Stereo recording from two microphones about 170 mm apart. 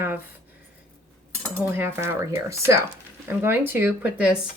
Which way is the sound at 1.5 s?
15° right (ahead or behind).